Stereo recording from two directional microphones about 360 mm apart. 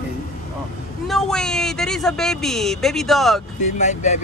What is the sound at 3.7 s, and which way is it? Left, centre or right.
Speech, centre.